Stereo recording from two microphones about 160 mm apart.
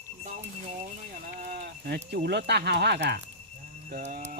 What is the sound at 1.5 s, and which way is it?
Speech, 85° right.